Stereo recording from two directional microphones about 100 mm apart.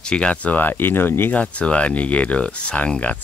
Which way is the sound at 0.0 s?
10° left (ahead or behind).